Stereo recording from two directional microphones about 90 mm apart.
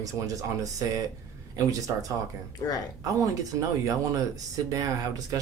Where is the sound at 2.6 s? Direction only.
50° left (ahead or behind).